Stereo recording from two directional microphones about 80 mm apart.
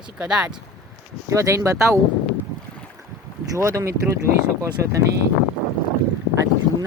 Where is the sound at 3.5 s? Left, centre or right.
Right.